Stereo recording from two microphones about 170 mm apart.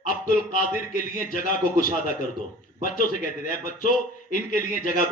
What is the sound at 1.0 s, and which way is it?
A man's voice, 55° left (ahead or behind).